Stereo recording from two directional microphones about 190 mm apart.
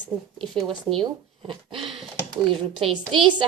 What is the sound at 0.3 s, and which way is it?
Speech, centre (ahead or behind).